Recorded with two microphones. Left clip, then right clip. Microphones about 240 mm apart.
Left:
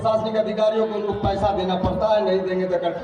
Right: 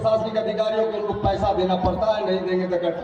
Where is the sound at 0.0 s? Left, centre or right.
Left.